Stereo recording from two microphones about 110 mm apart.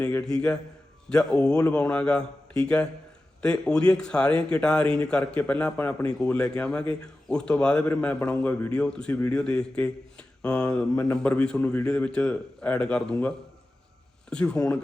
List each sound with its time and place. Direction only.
0.0 s a man's voice: 10° left (ahead or behind)
9.1 s a man's voice: 20° left (ahead or behind)